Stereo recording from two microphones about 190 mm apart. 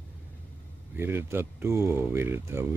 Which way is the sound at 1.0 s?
10° right (ahead or behind).